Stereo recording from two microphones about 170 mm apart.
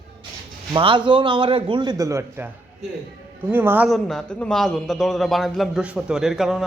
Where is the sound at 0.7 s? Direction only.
30° right (ahead or behind).